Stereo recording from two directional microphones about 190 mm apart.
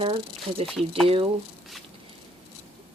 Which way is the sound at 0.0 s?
30° right (ahead or behind).